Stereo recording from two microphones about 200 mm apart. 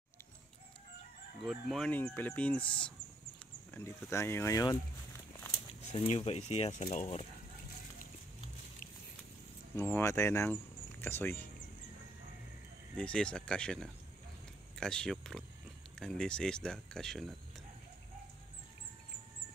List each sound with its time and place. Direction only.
1.4 s speech: centre (ahead or behind)
5.5 s speech: 30° left (ahead or behind)
9.8 s speech: 10° left (ahead or behind)
12.9 s speech: 5° left (ahead or behind)